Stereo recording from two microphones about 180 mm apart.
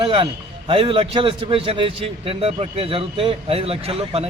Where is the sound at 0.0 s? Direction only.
30° right (ahead or behind).